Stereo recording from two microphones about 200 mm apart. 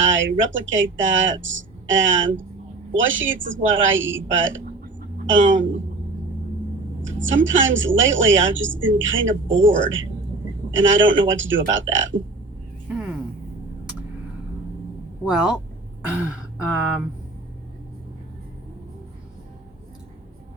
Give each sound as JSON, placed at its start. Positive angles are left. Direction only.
{"t": 0.0, "sound": "a woman's voice", "side_deg": -70}
{"t": 7.0, "sound": "a woman's voice", "side_deg": -70}
{"t": 12.9, "sound": "a sound", "side_deg": 0}
{"t": 15.2, "sound": "speech", "side_deg": -5}